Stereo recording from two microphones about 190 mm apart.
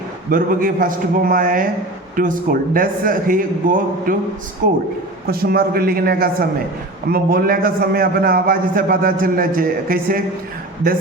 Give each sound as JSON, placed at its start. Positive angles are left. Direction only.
{"t": 0.3, "sound": "a man's voice", "side_deg": -50}
{"t": 5.3, "sound": "a man's voice", "side_deg": -55}